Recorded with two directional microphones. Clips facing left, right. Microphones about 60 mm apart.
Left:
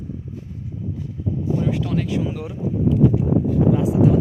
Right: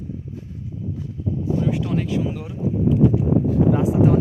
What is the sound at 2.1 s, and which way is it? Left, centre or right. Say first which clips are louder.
Speech: even; centre.